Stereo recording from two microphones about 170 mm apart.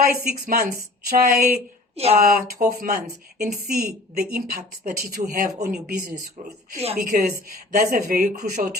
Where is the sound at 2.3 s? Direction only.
65° right (ahead or behind).